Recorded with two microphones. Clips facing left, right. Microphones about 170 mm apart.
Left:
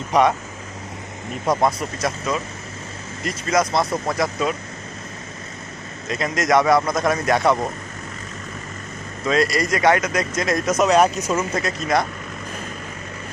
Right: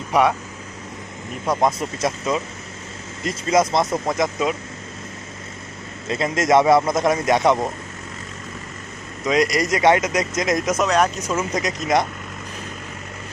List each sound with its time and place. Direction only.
0.1 s speech: 10° right (ahead or behind)
1.8 s speech: 25° right (ahead or behind)
6.1 s speech: 25° right (ahead or behind)
9.2 s speech: 20° right (ahead or behind)
10.8 s speech: 10° left (ahead or behind)
11.3 s speech: 15° right (ahead or behind)